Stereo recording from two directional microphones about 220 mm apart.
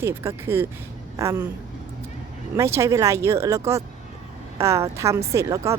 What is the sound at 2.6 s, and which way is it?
Speech, 15° right (ahead or behind).